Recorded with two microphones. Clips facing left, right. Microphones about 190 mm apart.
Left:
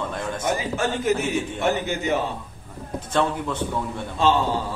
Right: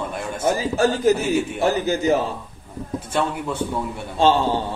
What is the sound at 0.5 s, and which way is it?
A man's voice, 35° right (ahead or behind).